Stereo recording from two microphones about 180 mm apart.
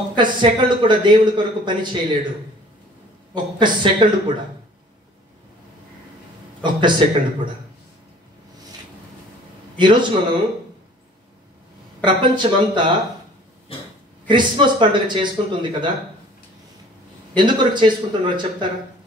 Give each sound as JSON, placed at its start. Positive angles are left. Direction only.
{"t": 0.1, "sound": "a man's voice", "side_deg": -25}
{"t": 3.3, "sound": "a man's voice", "side_deg": -25}
{"t": 6.6, "sound": "a man's voice", "side_deg": -25}
{"t": 9.8, "sound": "a man's voice", "side_deg": -25}
{"t": 12.0, "sound": "a man's voice", "side_deg": -25}
{"t": 14.2, "sound": "a man's voice", "side_deg": -25}
{"t": 17.4, "sound": "a man's voice", "side_deg": -25}